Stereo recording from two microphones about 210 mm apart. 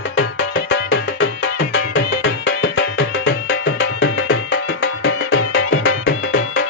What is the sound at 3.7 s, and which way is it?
Music, 70° left (ahead or behind).